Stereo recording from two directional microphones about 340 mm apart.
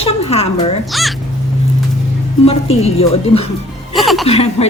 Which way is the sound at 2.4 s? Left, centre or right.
Centre.